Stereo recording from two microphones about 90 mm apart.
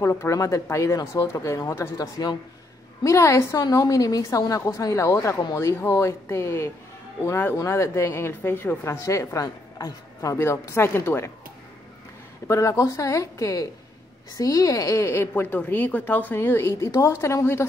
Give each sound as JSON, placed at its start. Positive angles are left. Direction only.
{"t": 0.0, "sound": "a woman's voice", "side_deg": 30}
{"t": 3.0, "sound": "a woman's voice", "side_deg": 35}
{"t": 9.0, "sound": "speech", "side_deg": 35}
{"t": 10.3, "sound": "a woman's voice", "side_deg": 30}
{"t": 12.4, "sound": "a woman's voice", "side_deg": 35}